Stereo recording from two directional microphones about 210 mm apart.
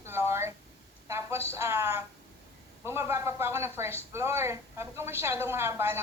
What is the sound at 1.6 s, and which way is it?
A woman's voice, 10° right (ahead or behind).